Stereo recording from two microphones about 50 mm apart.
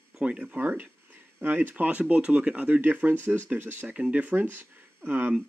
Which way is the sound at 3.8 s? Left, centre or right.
Right.